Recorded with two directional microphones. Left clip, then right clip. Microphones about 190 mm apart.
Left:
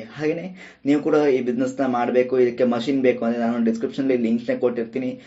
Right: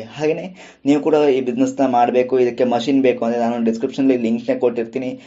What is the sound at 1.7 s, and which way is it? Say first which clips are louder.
A man's voice: right 6 dB; 20° right (ahead or behind).